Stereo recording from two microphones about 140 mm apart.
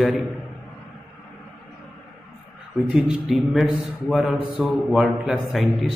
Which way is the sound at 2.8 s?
5° right (ahead or behind).